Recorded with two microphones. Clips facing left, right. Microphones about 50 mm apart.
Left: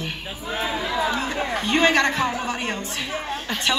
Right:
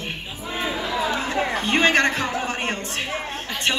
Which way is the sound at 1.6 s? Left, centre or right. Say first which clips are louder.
Even; right.